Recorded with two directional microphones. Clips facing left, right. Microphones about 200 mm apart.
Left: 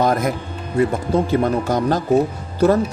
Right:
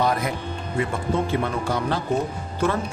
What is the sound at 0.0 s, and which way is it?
Music, 45° left (ahead or behind).